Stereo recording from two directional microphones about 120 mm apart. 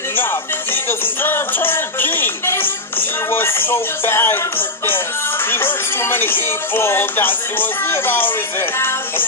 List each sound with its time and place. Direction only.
0.1 s music: 15° left (ahead or behind)